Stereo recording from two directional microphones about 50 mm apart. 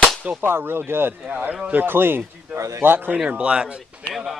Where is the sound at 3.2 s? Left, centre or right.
Right.